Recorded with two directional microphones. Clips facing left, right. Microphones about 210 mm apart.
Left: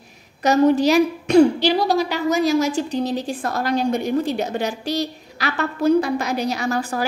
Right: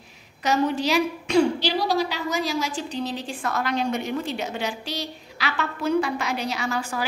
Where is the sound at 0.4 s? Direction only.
40° left (ahead or behind).